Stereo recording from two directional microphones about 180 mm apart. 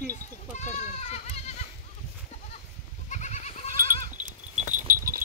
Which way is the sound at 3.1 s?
40° left (ahead or behind).